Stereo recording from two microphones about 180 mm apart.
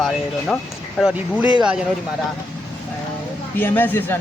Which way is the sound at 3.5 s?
10° left (ahead or behind).